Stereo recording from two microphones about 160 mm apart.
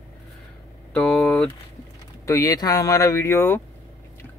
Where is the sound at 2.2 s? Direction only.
20° left (ahead or behind).